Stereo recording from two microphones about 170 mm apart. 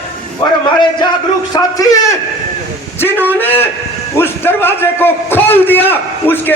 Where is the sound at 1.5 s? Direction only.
20° left (ahead or behind).